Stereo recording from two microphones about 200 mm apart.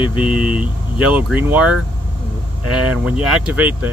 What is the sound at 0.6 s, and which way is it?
Speech, 5° right (ahead or behind).